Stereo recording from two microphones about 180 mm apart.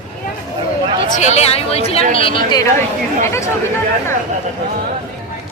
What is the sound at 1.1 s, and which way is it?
A woman's voice, 40° left (ahead or behind).